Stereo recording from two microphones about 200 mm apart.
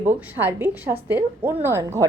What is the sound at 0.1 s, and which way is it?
Speech, 10° right (ahead or behind).